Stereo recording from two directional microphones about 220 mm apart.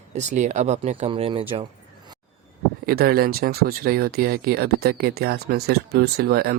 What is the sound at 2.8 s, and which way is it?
Speech, 45° right (ahead or behind).